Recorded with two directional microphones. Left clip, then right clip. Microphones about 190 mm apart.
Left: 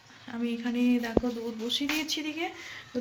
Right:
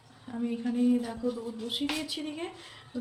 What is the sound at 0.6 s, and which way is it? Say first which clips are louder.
Speech: even; centre (ahead or behind).